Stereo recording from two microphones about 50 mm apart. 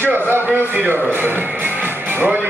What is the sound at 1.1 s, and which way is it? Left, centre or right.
Music, right.